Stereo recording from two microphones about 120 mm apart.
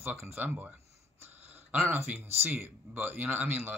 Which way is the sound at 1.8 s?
15° right (ahead or behind).